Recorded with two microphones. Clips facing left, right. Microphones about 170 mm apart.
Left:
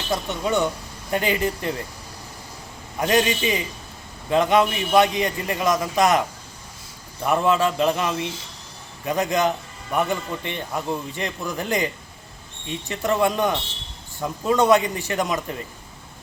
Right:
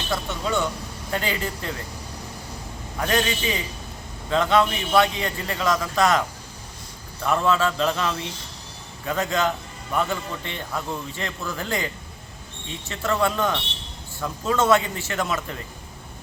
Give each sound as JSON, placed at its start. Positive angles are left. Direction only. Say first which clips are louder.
{"t": 0.1, "sound": "a man's voice", "louder": "left 3 dB", "side_deg": 20}
{"t": 3.0, "sound": "a man's voice", "louder": "left 4 dB", "side_deg": 20}
{"t": 12.9, "sound": "a man's voice", "louder": "left 2 dB", "side_deg": 15}